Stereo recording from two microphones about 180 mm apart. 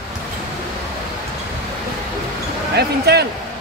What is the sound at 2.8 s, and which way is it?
Speech, 65° right (ahead or behind).